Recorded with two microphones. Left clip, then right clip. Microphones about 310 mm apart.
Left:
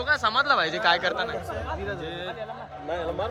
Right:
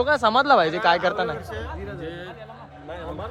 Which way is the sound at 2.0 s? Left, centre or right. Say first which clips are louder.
Left 1 dB; centre.